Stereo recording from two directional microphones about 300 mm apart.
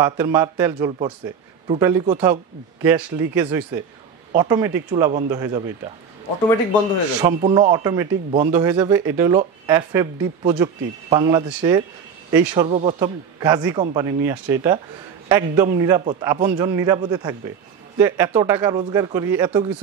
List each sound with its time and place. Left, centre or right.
0.0 s a man's voice: centre
7.2 s a man's voice: centre